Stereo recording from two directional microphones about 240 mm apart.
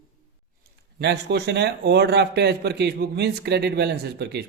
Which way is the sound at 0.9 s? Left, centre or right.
Right.